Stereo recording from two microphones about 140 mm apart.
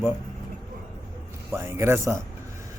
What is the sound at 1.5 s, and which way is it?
Speech, 20° right (ahead or behind).